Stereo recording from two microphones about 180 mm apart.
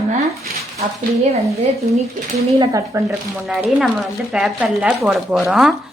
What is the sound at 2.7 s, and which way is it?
Speech, 15° right (ahead or behind).